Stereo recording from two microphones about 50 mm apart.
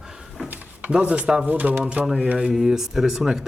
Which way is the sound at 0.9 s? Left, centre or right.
Right.